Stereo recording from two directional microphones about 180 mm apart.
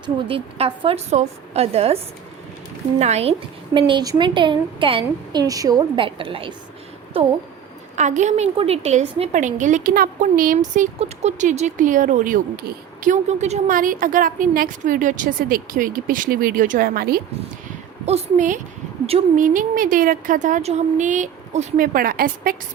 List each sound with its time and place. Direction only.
0.0 s a woman's voice: 30° right (ahead or behind)
3.0 s a woman's voice: 35° right (ahead or behind)
3.8 s a woman's voice: 25° right (ahead or behind)
7.9 s a woman's voice: 40° right (ahead or behind)
18.0 s a woman's voice: 40° right (ahead or behind)